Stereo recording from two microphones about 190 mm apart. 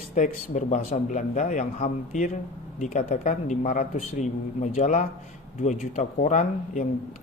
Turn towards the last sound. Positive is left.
turn(degrees=40)  # may be behind; listen again after turning